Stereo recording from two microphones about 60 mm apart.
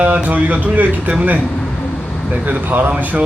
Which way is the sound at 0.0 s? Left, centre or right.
Right.